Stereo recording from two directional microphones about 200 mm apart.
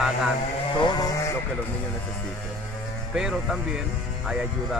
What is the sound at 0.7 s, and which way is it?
Sheep, 20° left (ahead or behind).